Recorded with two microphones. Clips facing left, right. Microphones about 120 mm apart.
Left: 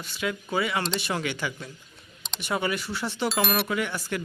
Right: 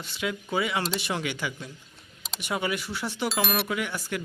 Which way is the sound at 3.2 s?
Centre (ahead or behind).